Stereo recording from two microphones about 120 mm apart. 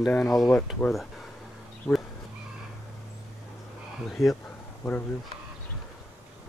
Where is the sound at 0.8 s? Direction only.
20° left (ahead or behind).